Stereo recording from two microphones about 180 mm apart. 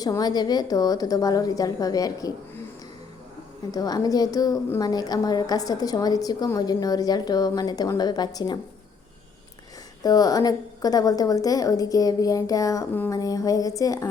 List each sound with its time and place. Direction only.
0.0 s a woman's voice: 20° left (ahead or behind)
3.7 s a woman's voice: 20° left (ahead or behind)
10.0 s a woman's voice: 20° left (ahead or behind)